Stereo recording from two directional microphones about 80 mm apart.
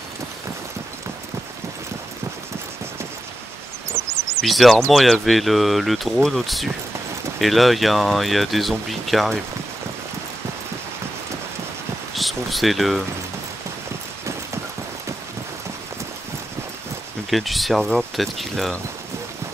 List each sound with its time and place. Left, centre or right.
4.0 s a sound: right
4.4 s speech: centre
12.2 s speech: centre
17.3 s speech: centre